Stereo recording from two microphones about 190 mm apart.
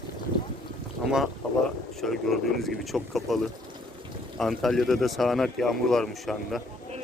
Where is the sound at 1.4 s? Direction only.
5° left (ahead or behind).